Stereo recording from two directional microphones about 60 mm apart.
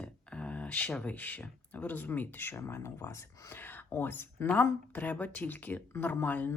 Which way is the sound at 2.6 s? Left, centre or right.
Left.